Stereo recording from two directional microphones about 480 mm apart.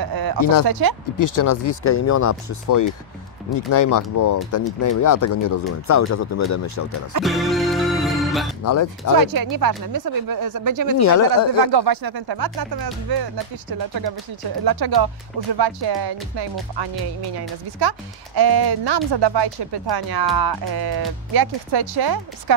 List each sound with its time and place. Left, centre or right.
0.0 s a sound: right
0.7 s speech: right
1.1 s speech: left
7.2 s music: centre
8.6 s speech: left
9.2 s speech: right
11.0 s speech: left
11.6 s speech: right